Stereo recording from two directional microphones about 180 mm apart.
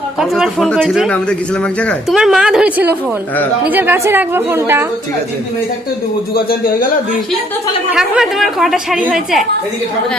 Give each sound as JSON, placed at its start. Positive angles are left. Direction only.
{"t": 0.2, "sound": "a woman's voice", "side_deg": 0}
{"t": 6.3, "sound": "speech", "side_deg": 60}
{"t": 7.9, "sound": "a woman's voice", "side_deg": 0}